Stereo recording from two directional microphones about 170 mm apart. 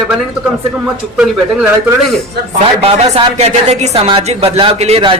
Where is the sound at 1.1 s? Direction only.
5° right (ahead or behind).